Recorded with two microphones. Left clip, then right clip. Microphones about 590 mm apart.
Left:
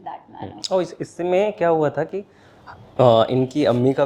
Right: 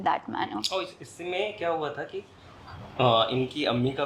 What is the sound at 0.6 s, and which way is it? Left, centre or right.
A woman's voice, left.